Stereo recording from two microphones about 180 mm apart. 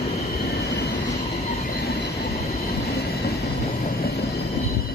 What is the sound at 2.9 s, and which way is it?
Train, 60° left (ahead or behind).